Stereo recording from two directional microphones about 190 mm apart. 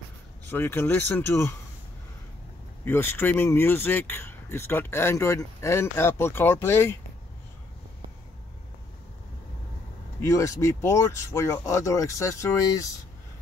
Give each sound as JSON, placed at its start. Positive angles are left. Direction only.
{"t": 0.5, "sound": "speech", "side_deg": 10}
{"t": 2.8, "sound": "speech", "side_deg": 10}
{"t": 10.2, "sound": "speech", "side_deg": 15}